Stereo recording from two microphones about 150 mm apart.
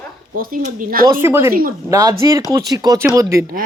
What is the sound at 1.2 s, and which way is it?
Speech, 15° right (ahead or behind).